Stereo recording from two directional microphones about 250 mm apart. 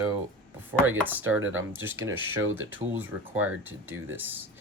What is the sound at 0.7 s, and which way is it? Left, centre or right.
Speech, centre.